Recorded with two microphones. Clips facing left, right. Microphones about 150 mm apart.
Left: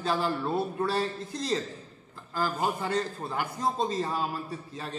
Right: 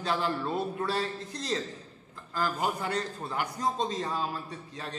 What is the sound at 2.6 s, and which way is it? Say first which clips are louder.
Speech: left 4 dB; 20° left (ahead or behind).